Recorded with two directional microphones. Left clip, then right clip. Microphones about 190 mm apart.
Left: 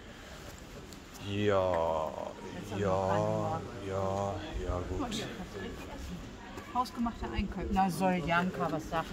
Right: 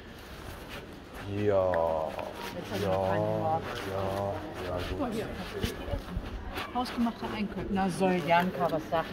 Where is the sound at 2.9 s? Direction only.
45° left (ahead or behind).